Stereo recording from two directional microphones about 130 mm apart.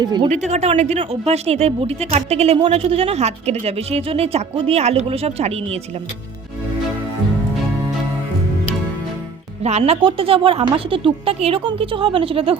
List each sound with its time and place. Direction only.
0.0 s a woman's voice: 30° right (ahead or behind)
0.3 s a woman's voice: 65° right (ahead or behind)
9.6 s a woman's voice: 55° right (ahead or behind)